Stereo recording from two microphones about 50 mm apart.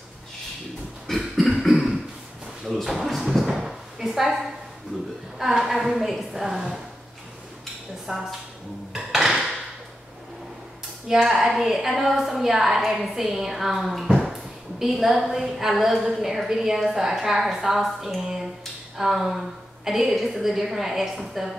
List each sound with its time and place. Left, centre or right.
1.0 s cough: centre
2.6 s a woman's voice: centre
8.1 s speech: centre
8.9 s dishes: centre
11.2 s a woman's voice: centre